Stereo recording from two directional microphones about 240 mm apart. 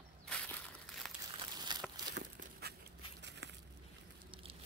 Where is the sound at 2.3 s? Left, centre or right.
Right.